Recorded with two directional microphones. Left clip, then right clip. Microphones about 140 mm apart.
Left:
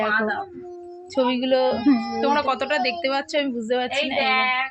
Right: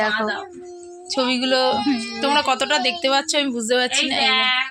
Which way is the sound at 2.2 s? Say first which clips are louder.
Right 4 dB; 25° right (ahead or behind).